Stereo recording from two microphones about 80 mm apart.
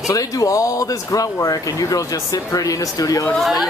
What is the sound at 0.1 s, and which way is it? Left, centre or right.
Speech, left.